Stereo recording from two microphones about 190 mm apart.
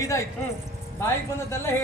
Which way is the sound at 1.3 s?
15° left (ahead or behind).